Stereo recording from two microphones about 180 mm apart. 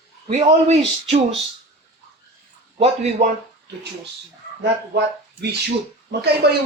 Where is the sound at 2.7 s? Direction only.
35° right (ahead or behind).